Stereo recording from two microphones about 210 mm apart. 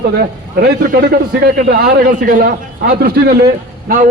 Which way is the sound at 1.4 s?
50° right (ahead or behind).